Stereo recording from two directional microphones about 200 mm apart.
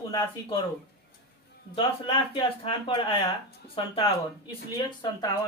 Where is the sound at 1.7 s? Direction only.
25° left (ahead or behind).